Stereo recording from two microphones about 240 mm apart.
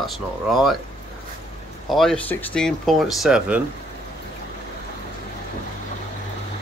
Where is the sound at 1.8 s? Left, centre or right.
Centre.